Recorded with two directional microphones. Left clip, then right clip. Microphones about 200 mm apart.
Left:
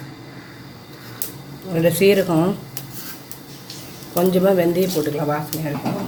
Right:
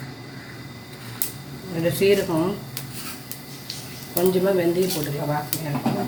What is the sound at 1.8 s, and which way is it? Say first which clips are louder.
Speech: left 4 dB; 45° left (ahead or behind).